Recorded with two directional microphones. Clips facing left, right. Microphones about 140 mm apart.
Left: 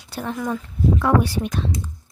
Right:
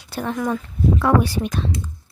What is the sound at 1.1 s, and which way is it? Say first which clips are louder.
Speech: right 1 dB; 90° right.